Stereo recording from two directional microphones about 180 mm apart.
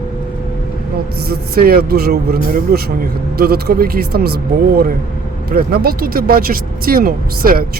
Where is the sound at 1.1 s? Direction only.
60° right (ahead or behind).